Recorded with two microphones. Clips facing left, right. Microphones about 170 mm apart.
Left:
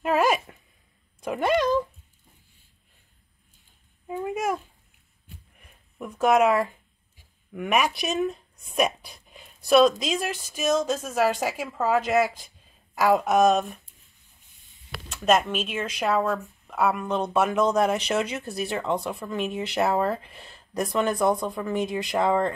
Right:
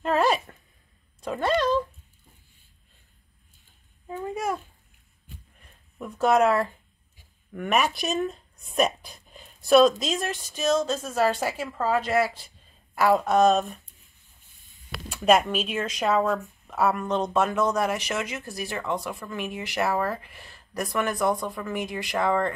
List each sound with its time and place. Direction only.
0.0 s a sound: 10° left (ahead or behind)
1.2 s speech: 15° left (ahead or behind)
4.1 s a child's voice: 15° left (ahead or behind)
6.2 s speech: 15° left (ahead or behind)
15.1 s speech: 5° right (ahead or behind); by 22.5 s 20° left (ahead or behind)